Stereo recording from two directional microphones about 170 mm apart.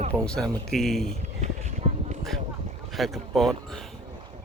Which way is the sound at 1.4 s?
40° right (ahead or behind).